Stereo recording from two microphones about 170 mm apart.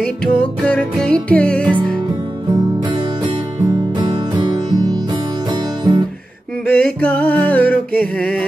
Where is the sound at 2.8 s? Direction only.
25° right (ahead or behind).